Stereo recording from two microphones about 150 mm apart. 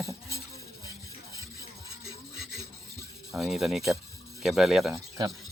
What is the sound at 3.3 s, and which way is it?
Speech, 5° right (ahead or behind).